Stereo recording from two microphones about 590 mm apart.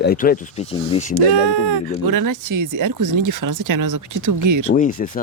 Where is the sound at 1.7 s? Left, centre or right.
Right.